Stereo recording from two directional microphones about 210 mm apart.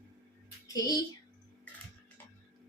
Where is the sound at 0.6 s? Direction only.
15° left (ahead or behind).